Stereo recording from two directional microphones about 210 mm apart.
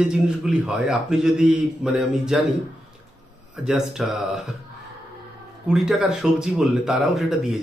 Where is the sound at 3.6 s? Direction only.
Centre (ahead or behind).